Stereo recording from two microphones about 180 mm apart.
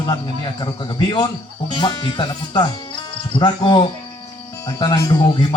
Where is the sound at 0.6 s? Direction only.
25° left (ahead or behind).